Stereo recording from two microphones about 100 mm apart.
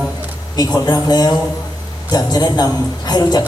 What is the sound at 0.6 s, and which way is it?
A man's voice, 40° left (ahead or behind).